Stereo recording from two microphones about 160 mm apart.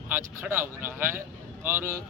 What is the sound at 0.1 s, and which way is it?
Speech, 15° right (ahead or behind).